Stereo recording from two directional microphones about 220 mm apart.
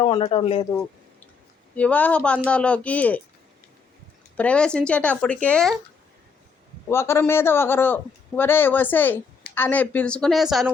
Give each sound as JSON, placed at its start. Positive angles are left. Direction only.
{"t": 0.0, "sound": "speech", "side_deg": 25}
{"t": 1.7, "sound": "speech", "side_deg": 5}
{"t": 4.4, "sound": "speech", "side_deg": 5}
{"t": 6.8, "sound": "a man's voice", "side_deg": 10}